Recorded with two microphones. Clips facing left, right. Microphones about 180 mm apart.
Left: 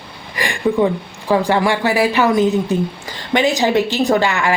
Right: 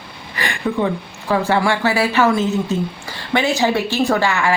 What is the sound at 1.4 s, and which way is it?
A woman's voice, 15° left (ahead or behind).